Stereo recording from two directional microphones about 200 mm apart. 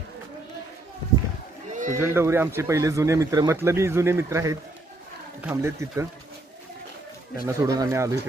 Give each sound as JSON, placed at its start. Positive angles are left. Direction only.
{"t": 1.7, "sound": "a sound", "side_deg": -40}
{"t": 2.0, "sound": "speech", "side_deg": -10}
{"t": 7.4, "sound": "speech", "side_deg": -15}